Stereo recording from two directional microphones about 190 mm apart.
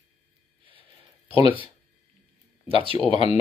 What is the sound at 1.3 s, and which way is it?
Speech, 30° left (ahead or behind).